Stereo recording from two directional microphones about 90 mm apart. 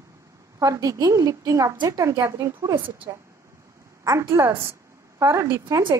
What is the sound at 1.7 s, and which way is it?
Speech, 50° right (ahead or behind).